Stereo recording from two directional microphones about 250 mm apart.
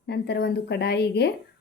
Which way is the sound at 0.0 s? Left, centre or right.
Left.